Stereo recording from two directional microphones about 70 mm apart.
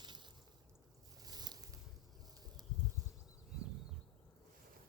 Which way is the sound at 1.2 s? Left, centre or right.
Right.